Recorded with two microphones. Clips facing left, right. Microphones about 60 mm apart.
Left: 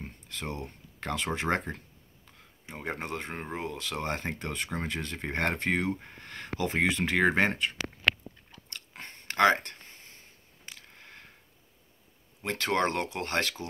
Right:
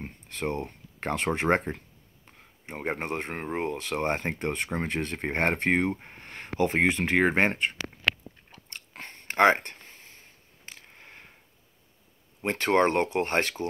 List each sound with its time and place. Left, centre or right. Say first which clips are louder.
0.0 s a sound: right 6 dB; right
0.7 s speech: right 4 dB; right
8.5 s chewing: right 1 dB; right
11.0 s sniff: right 1 dB; centre
12.4 s speech: right 5 dB; right